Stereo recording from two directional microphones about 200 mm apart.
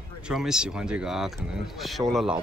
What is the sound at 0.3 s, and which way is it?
Speech, centre (ahead or behind).